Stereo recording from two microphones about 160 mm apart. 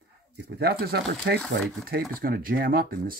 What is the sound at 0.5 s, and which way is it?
Speech, 75° right (ahead or behind).